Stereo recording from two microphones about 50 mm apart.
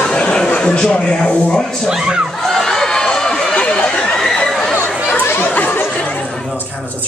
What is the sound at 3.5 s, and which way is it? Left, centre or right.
Chatter, left.